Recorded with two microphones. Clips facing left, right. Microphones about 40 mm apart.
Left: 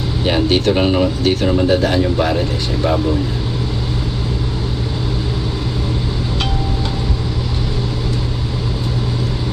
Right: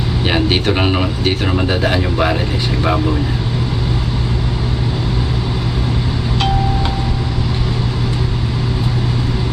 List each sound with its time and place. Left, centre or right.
0.3 s speech: right